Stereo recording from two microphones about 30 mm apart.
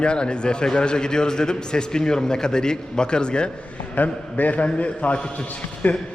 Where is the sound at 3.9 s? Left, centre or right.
Left.